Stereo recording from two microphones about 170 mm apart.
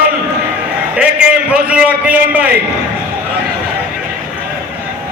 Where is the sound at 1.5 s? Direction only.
5° right (ahead or behind).